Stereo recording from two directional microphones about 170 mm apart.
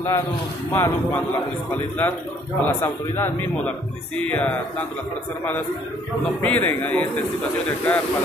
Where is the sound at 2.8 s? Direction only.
10° left (ahead or behind).